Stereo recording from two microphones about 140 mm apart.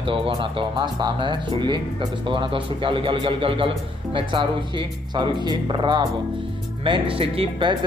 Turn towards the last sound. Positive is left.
turn(degrees=-40)  # may be behind; listen again after turning